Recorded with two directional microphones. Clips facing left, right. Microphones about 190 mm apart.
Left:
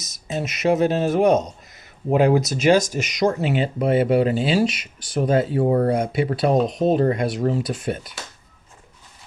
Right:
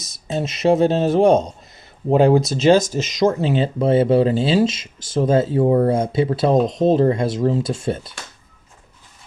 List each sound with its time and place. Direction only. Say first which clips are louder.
0.0 s speech: right 3 dB; 30° right (ahead or behind)